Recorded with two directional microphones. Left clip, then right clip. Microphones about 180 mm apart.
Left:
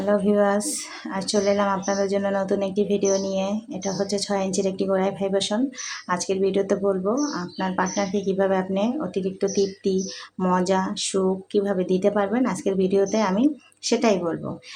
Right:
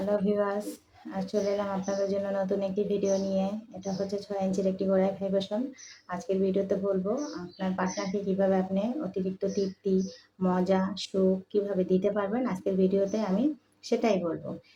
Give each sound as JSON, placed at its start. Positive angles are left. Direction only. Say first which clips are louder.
{"t": 0.1, "sound": "speech", "louder": "left 8 dB", "side_deg": 30}